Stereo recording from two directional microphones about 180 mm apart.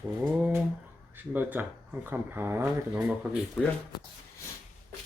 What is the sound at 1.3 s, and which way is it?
Speech, 10° right (ahead or behind).